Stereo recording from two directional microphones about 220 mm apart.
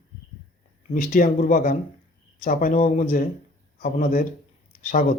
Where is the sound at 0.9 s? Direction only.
40° left (ahead or behind).